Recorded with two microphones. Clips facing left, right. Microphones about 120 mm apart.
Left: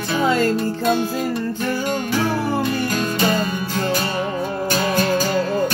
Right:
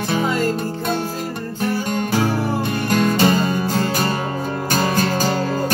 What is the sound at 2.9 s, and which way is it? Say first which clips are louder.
Music: right 4 dB; 40° right (ahead or behind).